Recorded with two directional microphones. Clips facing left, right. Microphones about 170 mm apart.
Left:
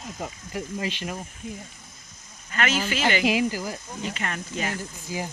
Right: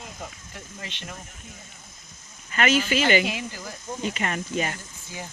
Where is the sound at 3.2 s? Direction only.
90° left.